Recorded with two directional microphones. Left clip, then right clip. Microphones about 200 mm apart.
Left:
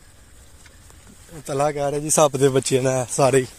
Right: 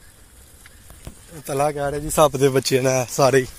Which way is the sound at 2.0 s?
20° left (ahead or behind).